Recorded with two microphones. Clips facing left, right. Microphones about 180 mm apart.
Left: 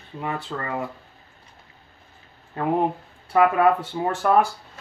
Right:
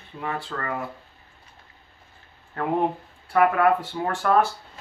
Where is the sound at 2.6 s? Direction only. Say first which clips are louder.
Left 1 dB; 20° left (ahead or behind).